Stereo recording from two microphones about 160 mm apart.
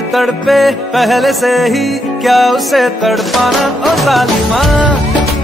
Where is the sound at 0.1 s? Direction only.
Centre (ahead or behind).